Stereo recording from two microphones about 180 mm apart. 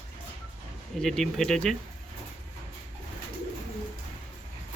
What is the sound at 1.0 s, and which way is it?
Speech, centre (ahead or behind).